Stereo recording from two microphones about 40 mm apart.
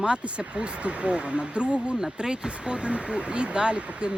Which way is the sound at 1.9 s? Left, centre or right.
Centre.